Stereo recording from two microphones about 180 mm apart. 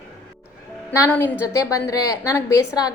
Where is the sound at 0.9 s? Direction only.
15° left (ahead or behind).